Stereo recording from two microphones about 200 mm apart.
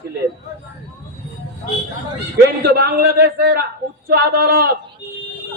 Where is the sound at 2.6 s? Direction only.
50° right (ahead or behind).